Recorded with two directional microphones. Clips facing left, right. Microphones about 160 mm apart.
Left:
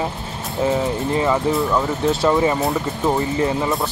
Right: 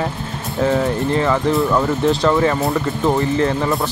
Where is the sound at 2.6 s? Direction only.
Centre (ahead or behind).